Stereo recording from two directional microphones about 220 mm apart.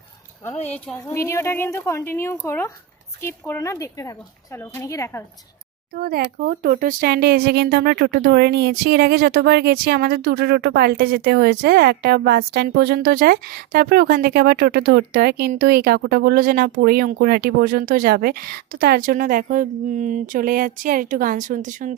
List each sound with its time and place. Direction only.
0.7 s a woman's voice: 10° left (ahead or behind)
5.9 s speech: 40° right (ahead or behind)